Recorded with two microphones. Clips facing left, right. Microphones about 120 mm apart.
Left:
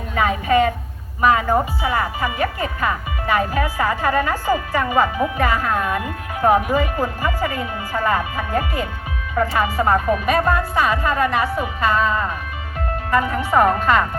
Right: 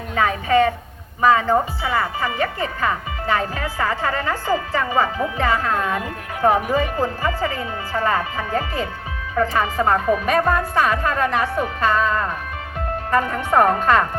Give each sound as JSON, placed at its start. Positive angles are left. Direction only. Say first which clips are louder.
{"t": 0.2, "sound": "a woman's voice", "louder": "even", "side_deg": 15}